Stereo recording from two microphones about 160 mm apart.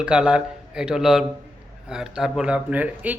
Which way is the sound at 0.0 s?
5° right (ahead or behind).